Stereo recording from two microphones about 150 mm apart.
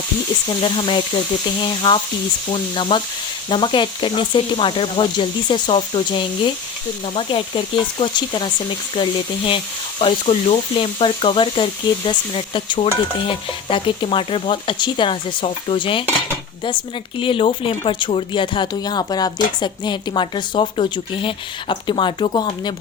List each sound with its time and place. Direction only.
0.4 s speech: 35° left (ahead or behind)